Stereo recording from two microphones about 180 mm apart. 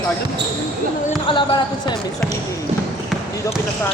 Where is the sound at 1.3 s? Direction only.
25° left (ahead or behind).